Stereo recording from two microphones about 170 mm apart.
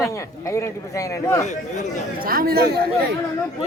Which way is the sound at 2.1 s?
60° right (ahead or behind).